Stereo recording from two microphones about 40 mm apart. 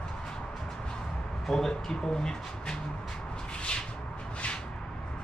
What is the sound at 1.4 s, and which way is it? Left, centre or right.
Speech, centre.